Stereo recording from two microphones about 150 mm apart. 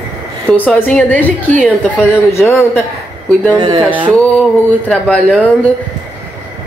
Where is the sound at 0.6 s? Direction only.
10° left (ahead or behind).